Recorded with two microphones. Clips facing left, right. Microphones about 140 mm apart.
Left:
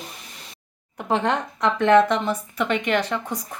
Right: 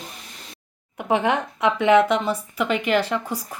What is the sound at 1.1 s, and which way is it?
Speech, 5° right (ahead or behind).